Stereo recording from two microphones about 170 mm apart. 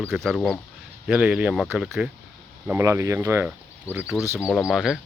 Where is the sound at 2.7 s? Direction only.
15° right (ahead or behind).